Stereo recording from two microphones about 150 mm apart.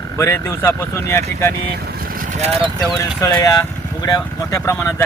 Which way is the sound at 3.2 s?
15° left (ahead or behind).